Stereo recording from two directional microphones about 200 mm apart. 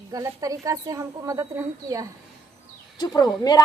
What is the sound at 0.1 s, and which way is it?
Speech, 15° right (ahead or behind).